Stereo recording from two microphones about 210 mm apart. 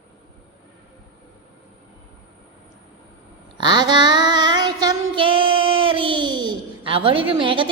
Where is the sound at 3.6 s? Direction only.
20° right (ahead or behind).